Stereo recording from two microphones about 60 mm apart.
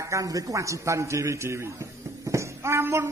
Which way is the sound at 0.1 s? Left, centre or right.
Right.